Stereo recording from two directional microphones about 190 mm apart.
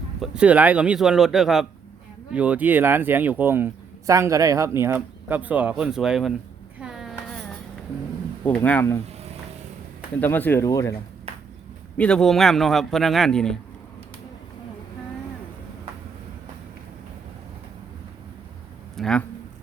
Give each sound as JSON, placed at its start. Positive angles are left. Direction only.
{"t": 0.2, "sound": "speech", "side_deg": -5}
{"t": 6.7, "sound": "a sound", "side_deg": -5}
{"t": 8.4, "sound": "speech", "side_deg": 10}
{"t": 10.2, "sound": "speech", "side_deg": 10}
{"t": 11.9, "sound": "speech", "side_deg": 5}
{"t": 18.9, "sound": "a sound", "side_deg": 5}